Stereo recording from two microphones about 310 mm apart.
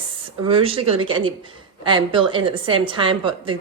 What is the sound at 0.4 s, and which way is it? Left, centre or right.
A woman's voice, centre.